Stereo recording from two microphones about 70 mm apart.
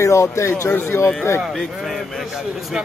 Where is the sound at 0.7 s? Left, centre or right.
Left.